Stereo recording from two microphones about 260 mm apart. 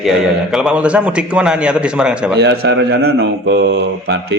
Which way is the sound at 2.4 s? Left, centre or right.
Right.